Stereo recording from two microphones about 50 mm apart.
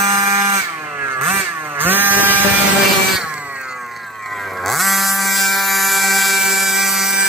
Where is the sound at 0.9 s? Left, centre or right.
Right.